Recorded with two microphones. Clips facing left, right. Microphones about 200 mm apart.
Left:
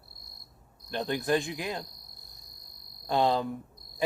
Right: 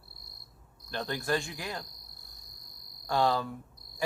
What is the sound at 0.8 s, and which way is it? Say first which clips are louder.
Speech: left 4 dB; 15° left (ahead or behind).